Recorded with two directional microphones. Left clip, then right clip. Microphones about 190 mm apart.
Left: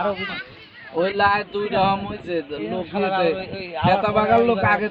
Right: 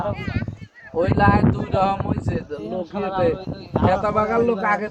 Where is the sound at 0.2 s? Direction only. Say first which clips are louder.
Left 3 dB; 35° left (ahead or behind).